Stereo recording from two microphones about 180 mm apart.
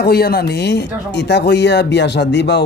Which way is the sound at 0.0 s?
60° left (ahead or behind).